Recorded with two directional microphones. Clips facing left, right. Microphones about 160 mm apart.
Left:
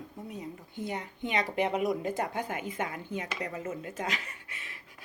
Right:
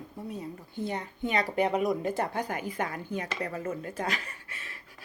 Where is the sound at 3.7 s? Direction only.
35° right (ahead or behind).